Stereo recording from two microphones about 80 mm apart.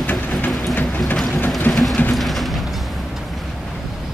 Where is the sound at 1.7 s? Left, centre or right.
Centre.